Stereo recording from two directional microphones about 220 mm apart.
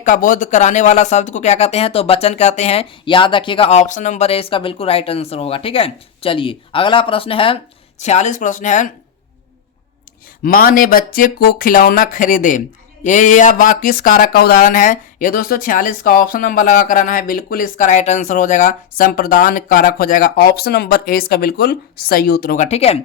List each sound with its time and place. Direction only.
0.0 s speech: 35° left (ahead or behind)
10.4 s speech: 40° left (ahead or behind)